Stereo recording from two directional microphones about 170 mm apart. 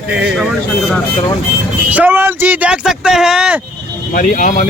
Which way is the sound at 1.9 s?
10° right (ahead or behind).